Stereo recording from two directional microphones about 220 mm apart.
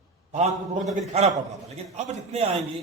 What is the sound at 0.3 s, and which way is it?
A man's voice, 30° right (ahead or behind).